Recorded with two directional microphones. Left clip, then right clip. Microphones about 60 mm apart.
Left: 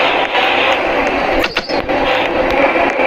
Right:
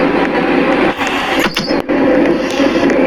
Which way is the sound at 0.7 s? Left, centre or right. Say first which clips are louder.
Right 1 dB; left.